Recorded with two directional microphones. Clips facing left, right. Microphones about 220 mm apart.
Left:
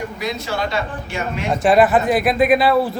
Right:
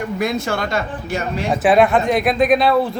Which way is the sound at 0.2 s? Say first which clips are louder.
Right 3 dB; 50° right (ahead or behind).